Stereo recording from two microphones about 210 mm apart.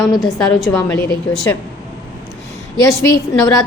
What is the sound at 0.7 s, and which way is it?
Speech, 10° left (ahead or behind).